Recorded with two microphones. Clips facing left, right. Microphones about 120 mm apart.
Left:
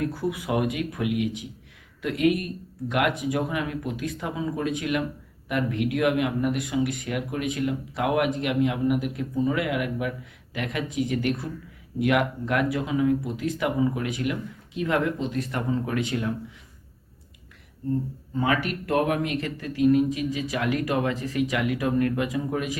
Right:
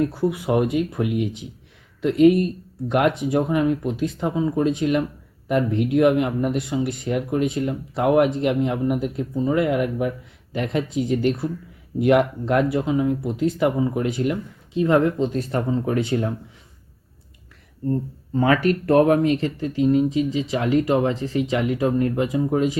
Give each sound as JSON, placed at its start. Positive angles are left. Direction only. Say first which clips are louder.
{"t": 0.0, "sound": "speech", "louder": "right 6 dB", "side_deg": -25}
{"t": 18.3, "sound": "speech", "louder": "right 7 dB", "side_deg": -40}